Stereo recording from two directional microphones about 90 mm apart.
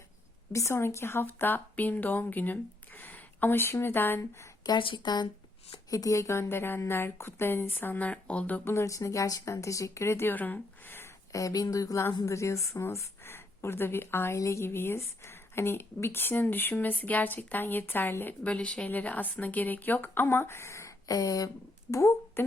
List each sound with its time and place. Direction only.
0.5 s a woman's voice: 30° left (ahead or behind)
4.8 s speech: 60° left (ahead or behind)
5.9 s a woman's voice: 35° left (ahead or behind); by 8.6 s 15° left (ahead or behind)
8.6 s speech: 30° left (ahead or behind)
11.3 s a woman's voice: 40° left (ahead or behind)
21.9 s speech: 30° left (ahead or behind)